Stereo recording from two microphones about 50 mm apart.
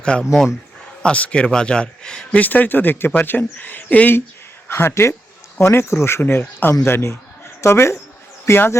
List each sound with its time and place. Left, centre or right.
0.0 s speech: centre
2.4 s speech: left
4.7 s speech: left
6.2 s speech: left
7.6 s speech: left
8.4 s speech: left